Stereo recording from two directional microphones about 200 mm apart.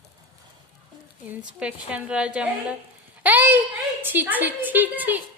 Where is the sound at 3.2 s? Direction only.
10° right (ahead or behind).